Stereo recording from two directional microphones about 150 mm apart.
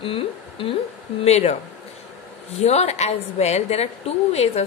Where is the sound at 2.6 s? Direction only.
45° left (ahead or behind).